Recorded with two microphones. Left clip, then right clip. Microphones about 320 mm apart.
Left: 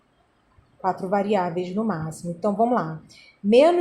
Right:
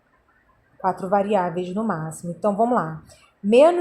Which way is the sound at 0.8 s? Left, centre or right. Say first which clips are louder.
Right 2 dB; centre.